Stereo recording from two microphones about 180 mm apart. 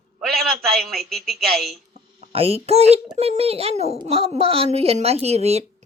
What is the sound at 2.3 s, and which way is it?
A child's voice, 35° right (ahead or behind).